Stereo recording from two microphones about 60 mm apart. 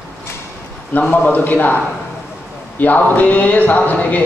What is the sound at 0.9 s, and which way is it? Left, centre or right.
A man's voice, left.